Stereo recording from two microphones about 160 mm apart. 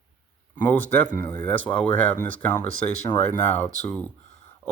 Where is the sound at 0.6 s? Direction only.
10° left (ahead or behind).